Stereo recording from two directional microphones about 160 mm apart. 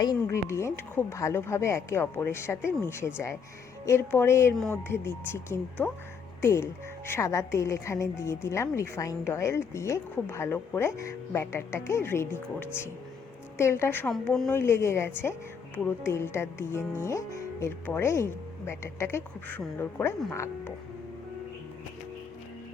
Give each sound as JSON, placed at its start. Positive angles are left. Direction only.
{"t": 0.0, "sound": "a woman's voice", "side_deg": 20}